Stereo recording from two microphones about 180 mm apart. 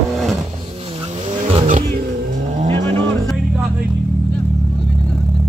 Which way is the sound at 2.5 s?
35° right (ahead or behind).